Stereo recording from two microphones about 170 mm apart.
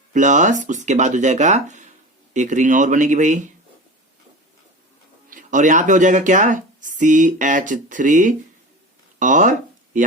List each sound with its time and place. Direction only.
0.1 s speech: 45° right (ahead or behind)
5.3 s speech: 50° right (ahead or behind)
9.1 s a sound: 45° right (ahead or behind)